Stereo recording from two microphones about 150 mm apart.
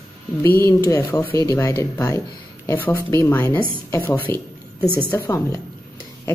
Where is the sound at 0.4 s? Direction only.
20° left (ahead or behind).